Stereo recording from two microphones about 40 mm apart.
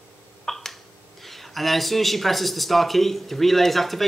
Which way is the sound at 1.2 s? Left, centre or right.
Centre.